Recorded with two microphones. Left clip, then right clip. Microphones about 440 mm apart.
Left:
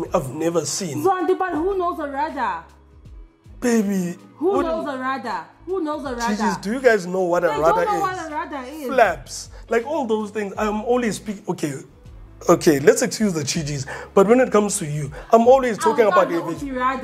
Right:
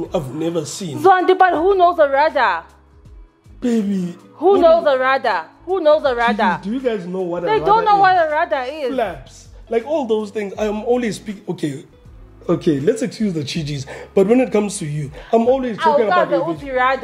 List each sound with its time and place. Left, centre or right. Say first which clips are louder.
0.1 s speech: left 1 dB; left
1.0 s a woman's voice: right 9 dB; right
3.6 s speech: even; left
4.5 s a woman's voice: right 10 dB; right
6.6 s speech: left 4 dB; left
7.7 s a woman's voice: right 8 dB; right
9.7 s speech: right 3 dB; left
12.4 s speech: left 3 dB; left
16.6 s a woman's voice: right 4 dB; right